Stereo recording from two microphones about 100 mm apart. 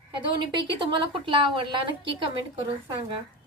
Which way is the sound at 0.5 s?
55° right (ahead or behind).